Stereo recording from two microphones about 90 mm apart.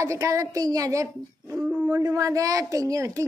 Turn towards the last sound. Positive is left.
turn(degrees=-35)  # may be behind; listen again after turning